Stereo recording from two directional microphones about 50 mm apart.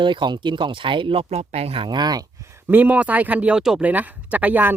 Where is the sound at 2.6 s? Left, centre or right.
Right.